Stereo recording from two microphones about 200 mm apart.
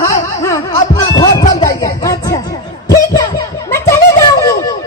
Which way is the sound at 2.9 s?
15° left (ahead or behind).